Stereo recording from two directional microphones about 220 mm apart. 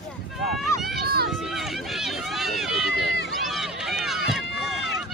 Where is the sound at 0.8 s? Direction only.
Centre (ahead or behind).